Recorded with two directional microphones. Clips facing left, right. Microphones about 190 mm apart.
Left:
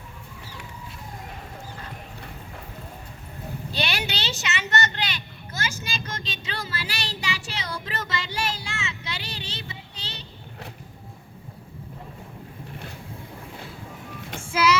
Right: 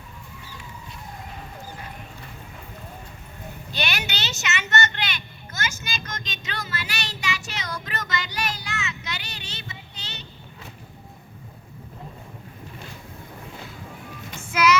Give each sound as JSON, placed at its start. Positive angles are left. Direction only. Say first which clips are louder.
{"t": 3.7, "sound": "vehicle", "louder": "left 1 dB", "side_deg": 30}
{"t": 14.4, "sound": "music", "louder": "right 1 dB", "side_deg": 30}